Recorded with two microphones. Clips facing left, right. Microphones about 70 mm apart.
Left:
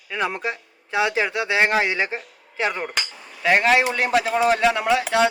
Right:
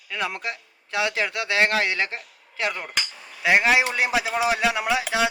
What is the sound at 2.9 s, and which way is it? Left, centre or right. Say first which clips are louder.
Speech: left 1 dB; centre.